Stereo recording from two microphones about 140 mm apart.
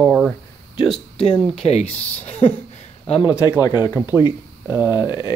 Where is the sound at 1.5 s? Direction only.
45° left (ahead or behind).